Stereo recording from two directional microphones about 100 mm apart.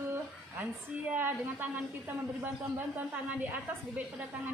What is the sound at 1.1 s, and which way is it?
A woman's voice, 20° right (ahead or behind).